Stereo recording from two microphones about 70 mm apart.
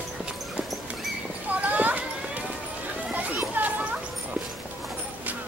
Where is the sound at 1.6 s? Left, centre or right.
Right.